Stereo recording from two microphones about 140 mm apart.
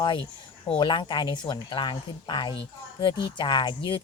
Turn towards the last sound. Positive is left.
turn(degrees=35)  # may be behind; listen again after turning